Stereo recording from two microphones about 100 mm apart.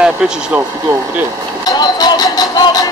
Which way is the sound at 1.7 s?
40° left (ahead or behind).